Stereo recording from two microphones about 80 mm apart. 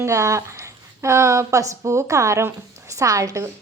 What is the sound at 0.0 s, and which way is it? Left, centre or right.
A woman's voice, right.